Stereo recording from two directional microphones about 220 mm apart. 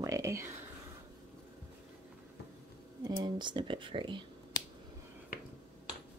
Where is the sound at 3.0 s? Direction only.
20° right (ahead or behind).